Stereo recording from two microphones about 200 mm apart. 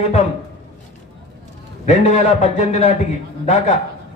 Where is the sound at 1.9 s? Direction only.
30° left (ahead or behind).